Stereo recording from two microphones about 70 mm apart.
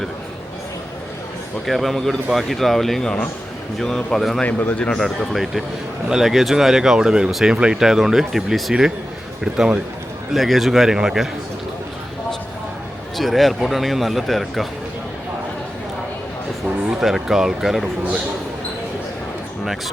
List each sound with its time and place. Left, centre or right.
1.6 s a man's voice: centre
4.4 s speech: left
4.9 s a man's voice: centre
10.3 s a man's voice: centre
13.1 s a man's voice: centre
17.0 s a man's voice: centre